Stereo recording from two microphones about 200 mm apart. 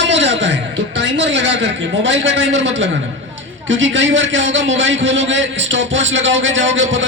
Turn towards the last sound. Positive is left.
turn(degrees=-70)  # may be behind; listen again after turning